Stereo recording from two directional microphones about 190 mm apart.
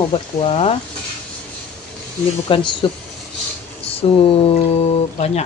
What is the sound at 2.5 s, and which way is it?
Speech, 25° left (ahead or behind).